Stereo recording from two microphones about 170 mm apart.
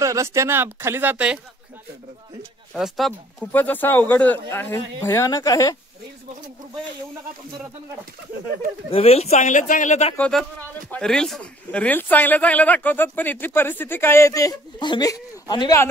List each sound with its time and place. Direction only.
0.0 s speech: 15° right (ahead or behind)
2.7 s speech: centre (ahead or behind); by 5.8 s 20° left (ahead or behind)
8.9 s speech: 35° left (ahead or behind)
10.1 s speech: 10° left (ahead or behind); by 15.8 s 25° left (ahead or behind)